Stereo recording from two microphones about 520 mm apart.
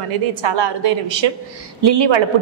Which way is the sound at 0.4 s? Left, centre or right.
Right.